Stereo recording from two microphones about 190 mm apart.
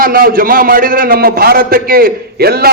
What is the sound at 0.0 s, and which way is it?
A man's voice, 50° right (ahead or behind).